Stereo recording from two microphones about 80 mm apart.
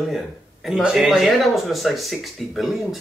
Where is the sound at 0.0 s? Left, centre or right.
Centre.